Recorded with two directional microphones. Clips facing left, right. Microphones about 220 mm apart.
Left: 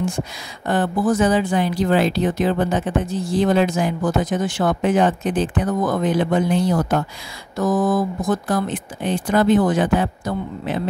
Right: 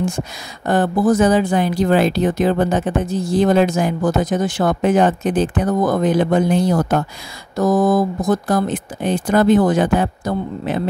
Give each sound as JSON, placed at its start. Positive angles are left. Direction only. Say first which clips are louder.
{"t": 0.7, "sound": "speech", "louder": "right 4 dB", "side_deg": -45}